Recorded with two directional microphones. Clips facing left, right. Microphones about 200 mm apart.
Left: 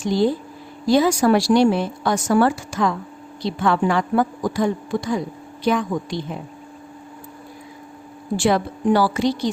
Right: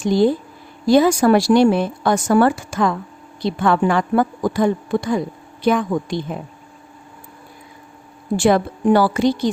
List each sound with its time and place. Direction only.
0.0 s a woman's voice: 50° right (ahead or behind)
8.4 s speech: 50° right (ahead or behind)